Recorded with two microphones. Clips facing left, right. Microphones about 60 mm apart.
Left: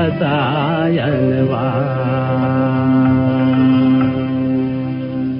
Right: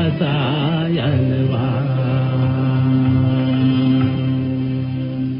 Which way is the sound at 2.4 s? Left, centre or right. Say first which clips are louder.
Left 6 dB; left.